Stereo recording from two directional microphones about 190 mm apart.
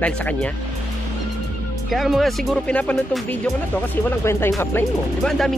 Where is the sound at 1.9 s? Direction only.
Centre (ahead or behind).